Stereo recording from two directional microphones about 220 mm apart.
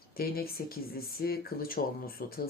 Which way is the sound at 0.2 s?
45° left (ahead or behind).